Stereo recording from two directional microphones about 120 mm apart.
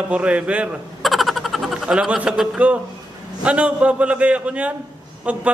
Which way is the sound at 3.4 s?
10° right (ahead or behind).